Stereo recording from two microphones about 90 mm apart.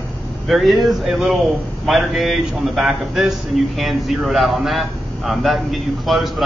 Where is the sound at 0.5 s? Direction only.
Centre (ahead or behind).